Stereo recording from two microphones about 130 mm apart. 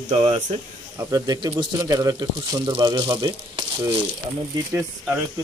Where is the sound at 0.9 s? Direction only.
30° right (ahead or behind).